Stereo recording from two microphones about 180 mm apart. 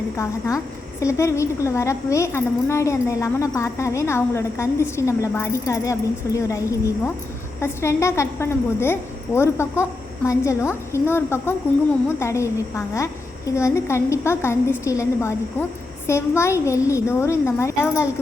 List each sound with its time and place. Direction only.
0.2 s a woman's voice: 15° left (ahead or behind)